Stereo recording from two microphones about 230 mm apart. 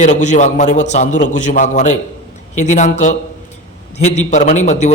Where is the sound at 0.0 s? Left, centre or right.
Left.